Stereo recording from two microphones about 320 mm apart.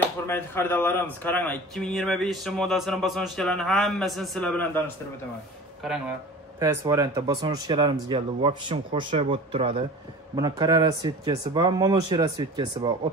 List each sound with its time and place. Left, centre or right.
0.3 s a man's voice: centre
6.6 s speech: centre